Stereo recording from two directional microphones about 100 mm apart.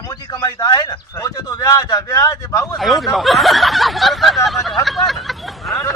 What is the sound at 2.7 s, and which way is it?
Speech, centre (ahead or behind).